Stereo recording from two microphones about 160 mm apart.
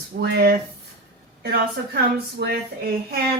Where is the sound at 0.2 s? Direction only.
90° right.